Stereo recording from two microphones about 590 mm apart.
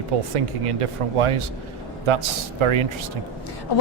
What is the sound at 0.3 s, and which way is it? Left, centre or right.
Speech, right.